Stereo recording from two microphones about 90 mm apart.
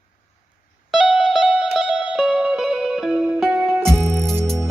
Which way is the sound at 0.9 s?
5° right (ahead or behind).